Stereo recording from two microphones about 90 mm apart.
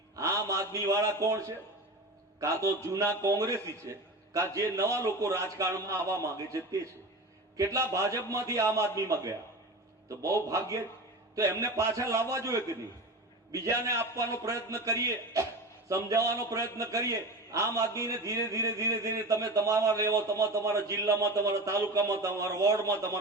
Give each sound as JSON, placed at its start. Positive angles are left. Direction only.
{"t": 0.2, "sound": "a man's voice", "side_deg": -35}
{"t": 13.8, "sound": "a man's voice", "side_deg": -35}